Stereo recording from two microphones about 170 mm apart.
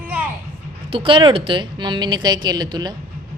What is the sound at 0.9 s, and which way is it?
A woman's voice, 30° right (ahead or behind).